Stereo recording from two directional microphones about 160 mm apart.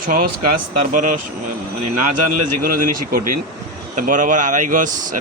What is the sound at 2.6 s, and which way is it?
Speech, 65° right (ahead or behind).